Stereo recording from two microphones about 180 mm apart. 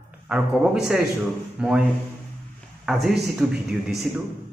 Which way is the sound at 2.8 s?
Centre (ahead or behind).